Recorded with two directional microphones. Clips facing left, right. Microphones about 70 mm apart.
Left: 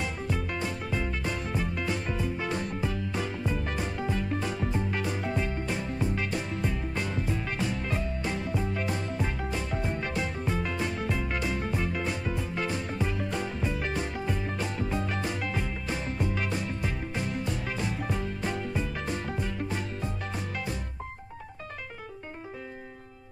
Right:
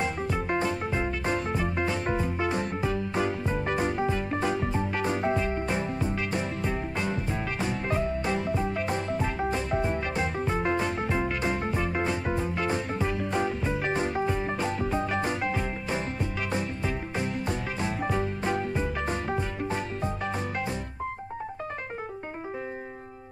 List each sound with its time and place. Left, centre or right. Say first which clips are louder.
0.0 s music: right 4 dB; right
8.6 s music: right 3 dB; right
17.5 s music: right 2 dB; right